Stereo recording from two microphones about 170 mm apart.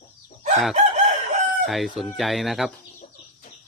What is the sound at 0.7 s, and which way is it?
Chicken, 40° right (ahead or behind).